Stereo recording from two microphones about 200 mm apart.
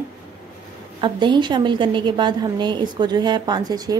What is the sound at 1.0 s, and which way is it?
A woman's voice, 25° right (ahead or behind).